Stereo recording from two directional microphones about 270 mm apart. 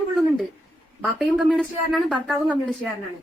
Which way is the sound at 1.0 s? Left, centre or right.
Centre.